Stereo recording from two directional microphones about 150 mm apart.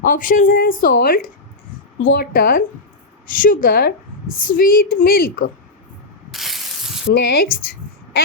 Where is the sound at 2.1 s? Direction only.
90° left.